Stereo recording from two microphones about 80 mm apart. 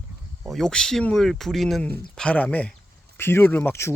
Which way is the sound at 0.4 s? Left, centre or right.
Centre.